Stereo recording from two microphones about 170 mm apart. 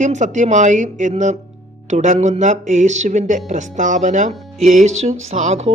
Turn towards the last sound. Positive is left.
turn(degrees=-40)  # may be behind; listen again after turning